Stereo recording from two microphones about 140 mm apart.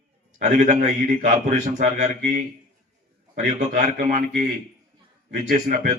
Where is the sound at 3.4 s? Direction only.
65° right (ahead or behind).